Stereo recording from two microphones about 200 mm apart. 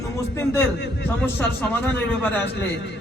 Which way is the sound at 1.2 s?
10° left (ahead or behind).